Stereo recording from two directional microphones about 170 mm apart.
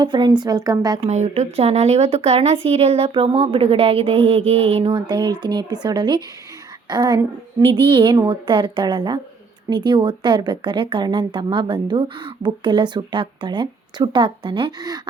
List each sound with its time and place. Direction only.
0.0 s a woman's voice: 30° right (ahead or behind)
1.0 s a woman's voice: 40° right (ahead or behind); by 15.0 s 25° right (ahead or behind)